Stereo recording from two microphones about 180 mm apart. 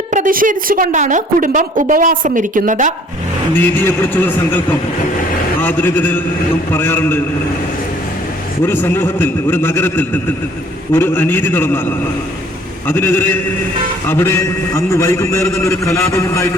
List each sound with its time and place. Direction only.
0.1 s a woman's voice: 50° right (ahead or behind)
3.8 s a man's voice: 10° left (ahead or behind)
5.5 s a man's voice: 10° left (ahead or behind)
8.6 s a man's voice: 10° left (ahead or behind)